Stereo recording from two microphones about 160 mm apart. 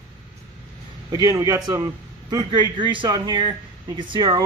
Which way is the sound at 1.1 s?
20° right (ahead or behind).